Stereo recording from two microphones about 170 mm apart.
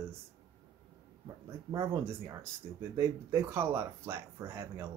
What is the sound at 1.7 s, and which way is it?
Speech, 15° right (ahead or behind).